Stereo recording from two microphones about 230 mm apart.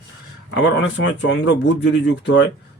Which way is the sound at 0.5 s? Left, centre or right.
Left.